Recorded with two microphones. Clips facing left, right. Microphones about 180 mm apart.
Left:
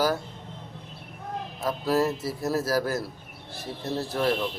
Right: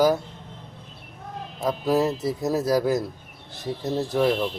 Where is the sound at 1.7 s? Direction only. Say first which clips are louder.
Right 3 dB; 15° right (ahead or behind).